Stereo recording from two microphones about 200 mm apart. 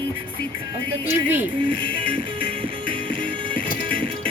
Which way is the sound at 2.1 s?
25° right (ahead or behind).